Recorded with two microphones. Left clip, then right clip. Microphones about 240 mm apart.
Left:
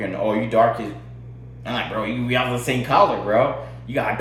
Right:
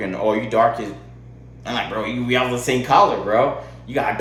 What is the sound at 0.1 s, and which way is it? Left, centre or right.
A man's voice, centre.